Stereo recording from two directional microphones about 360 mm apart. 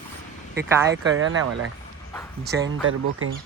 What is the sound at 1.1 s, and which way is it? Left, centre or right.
Speech, right.